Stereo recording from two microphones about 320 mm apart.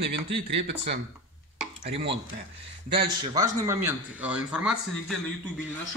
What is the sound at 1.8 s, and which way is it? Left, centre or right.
Speech, centre.